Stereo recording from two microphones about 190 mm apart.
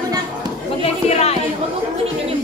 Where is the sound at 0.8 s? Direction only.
35° left (ahead or behind).